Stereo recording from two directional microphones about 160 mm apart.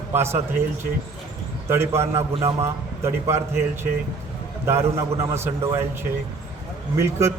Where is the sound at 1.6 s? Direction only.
15° right (ahead or behind).